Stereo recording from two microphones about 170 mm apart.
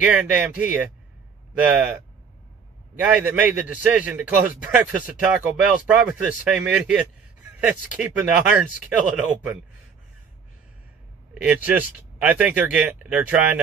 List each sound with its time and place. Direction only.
0.0 s a man's voice: 5° right (ahead or behind)
3.0 s a man's voice: 10° right (ahead or behind)
11.4 s a man's voice: 10° right (ahead or behind)